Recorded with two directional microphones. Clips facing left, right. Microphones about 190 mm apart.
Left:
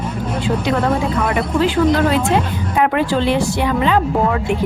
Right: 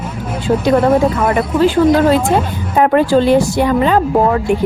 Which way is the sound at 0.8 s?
25° right (ahead or behind).